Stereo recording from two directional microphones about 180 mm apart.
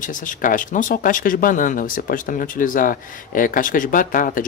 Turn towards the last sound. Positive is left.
turn(degrees=50)  # may be behind; listen again after turning